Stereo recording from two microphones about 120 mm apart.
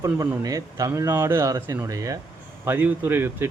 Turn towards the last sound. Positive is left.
turn(degrees=-20)  # may be behind; listen again after turning